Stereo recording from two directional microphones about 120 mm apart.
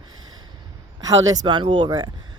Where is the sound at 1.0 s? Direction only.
30° right (ahead or behind).